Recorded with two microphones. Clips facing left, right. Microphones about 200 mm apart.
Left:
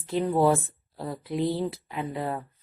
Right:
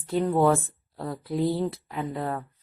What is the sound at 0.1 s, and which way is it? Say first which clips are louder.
A woman's voice: right 1 dB; 5° left (ahead or behind).